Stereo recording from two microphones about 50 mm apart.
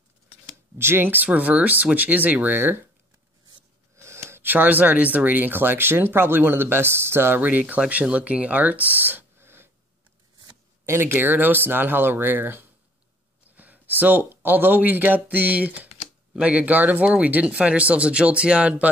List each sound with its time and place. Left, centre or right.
0.7 s speech: right
1.1 s speech: right
3.9 s a sound: right
4.4 s speech: right
7.4 s speech: right
10.9 s speech: right